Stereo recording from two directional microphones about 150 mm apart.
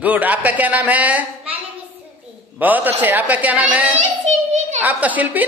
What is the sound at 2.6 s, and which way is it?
A woman's voice, 10° right (ahead or behind).